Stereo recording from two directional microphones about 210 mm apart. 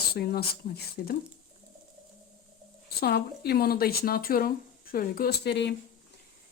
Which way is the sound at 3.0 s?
50° left (ahead or behind).